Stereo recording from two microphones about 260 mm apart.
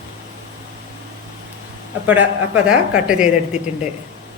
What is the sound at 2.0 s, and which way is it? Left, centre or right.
Speech, centre.